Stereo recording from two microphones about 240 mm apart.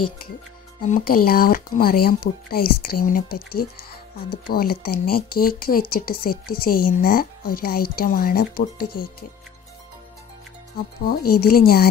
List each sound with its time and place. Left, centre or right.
0.8 s speech: left
6.3 s a woman's voice: left
6.6 s speech: left
11.1 s speech: left